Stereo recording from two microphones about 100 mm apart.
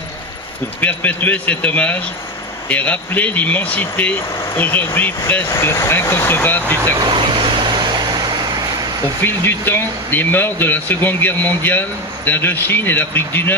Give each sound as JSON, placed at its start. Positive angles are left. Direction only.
{"t": 0.7, "sound": "speech", "side_deg": 15}
{"t": 7.1, "sound": "vehicle", "side_deg": -55}
{"t": 9.2, "sound": "speech", "side_deg": 20}